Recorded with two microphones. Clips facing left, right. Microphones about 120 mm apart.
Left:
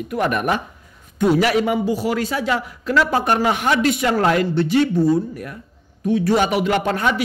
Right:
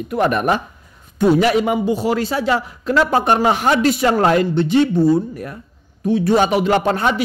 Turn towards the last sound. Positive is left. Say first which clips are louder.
# right 3 dB
turn(degrees=-30)  # may be behind; listen again after turning